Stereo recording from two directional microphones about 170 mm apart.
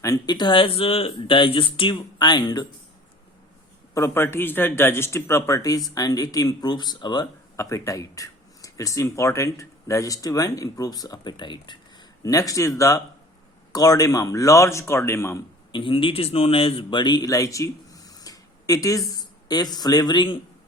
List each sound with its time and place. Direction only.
0.0 s speech: 20° left (ahead or behind)
3.9 s a man's voice: 15° left (ahead or behind)
15.7 s speech: 30° left (ahead or behind)